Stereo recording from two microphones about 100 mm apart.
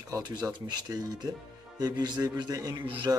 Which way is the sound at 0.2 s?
45° right (ahead or behind).